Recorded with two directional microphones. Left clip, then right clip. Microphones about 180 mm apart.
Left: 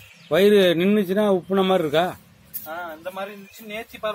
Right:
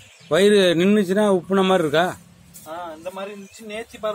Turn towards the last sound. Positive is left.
turn(degrees=-20)  # may be behind; listen again after turning